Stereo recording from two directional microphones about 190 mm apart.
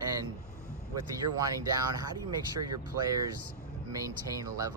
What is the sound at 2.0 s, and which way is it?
Speech, 20° right (ahead or behind).